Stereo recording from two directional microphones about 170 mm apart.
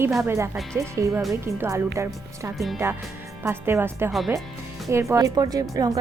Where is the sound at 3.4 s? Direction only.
15° right (ahead or behind).